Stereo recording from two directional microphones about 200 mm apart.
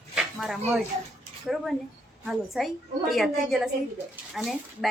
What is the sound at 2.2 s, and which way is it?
A woman's voice, centre (ahead or behind).